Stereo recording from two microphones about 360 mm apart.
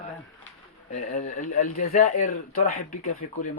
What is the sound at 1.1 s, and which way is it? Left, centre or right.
Speech, left.